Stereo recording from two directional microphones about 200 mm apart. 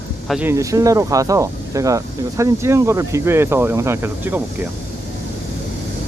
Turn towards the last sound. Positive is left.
turn(degrees=-10)  # may be behind; listen again after turning